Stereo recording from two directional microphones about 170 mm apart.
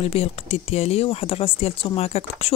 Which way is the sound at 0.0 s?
40° left (ahead or behind).